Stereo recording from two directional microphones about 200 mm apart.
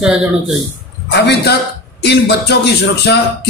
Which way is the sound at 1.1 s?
55° left (ahead or behind).